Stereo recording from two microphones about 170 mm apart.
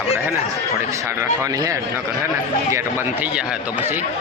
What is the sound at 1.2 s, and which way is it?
A man's voice, 20° right (ahead or behind).